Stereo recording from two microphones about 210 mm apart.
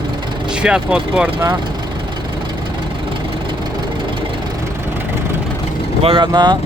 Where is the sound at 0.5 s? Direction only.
5° right (ahead or behind).